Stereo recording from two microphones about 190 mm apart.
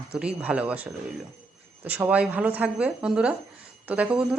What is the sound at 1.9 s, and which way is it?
A woman's voice, 5° right (ahead or behind).